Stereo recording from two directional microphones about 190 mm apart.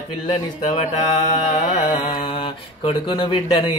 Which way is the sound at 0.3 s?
35° left (ahead or behind).